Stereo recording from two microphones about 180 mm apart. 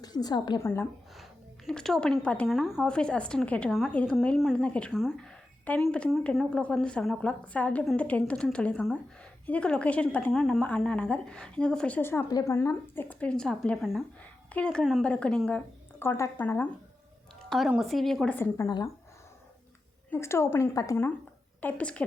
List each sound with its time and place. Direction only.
0.0 s a woman's voice: 20° left (ahead or behind)
0.6 s a woman's voice: 15° left (ahead or behind)
1.1 s a woman's voice: centre (ahead or behind)
17.5 s a woman's voice: centre (ahead or behind)
18.3 s a woman's voice: 15° left (ahead or behind)
20.1 s a woman's voice: 15° left (ahead or behind)